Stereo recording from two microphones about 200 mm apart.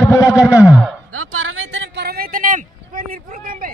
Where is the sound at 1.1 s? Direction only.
90° right; by 3.7 s 45° right (ahead or behind).